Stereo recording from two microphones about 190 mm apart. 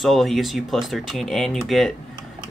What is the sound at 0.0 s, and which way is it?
Speech, centre (ahead or behind).